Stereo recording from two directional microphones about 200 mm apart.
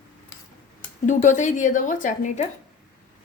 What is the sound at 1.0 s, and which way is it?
A woman's voice, 40° left (ahead or behind).